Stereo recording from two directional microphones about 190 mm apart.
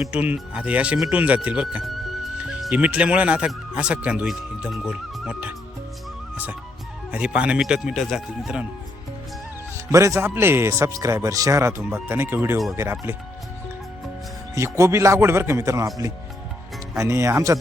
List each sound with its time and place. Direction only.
0.0 s speech: 5° right (ahead or behind)
6.3 s music: 10° right (ahead or behind)
7.1 s speech: 5° right (ahead or behind)
9.7 s speech: 15° right (ahead or behind)
14.5 s speech: 15° right (ahead or behind)
17.0 s speech: 15° right (ahead or behind)